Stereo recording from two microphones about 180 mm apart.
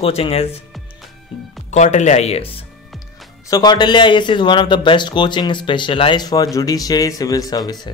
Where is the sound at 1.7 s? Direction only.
40° left (ahead or behind).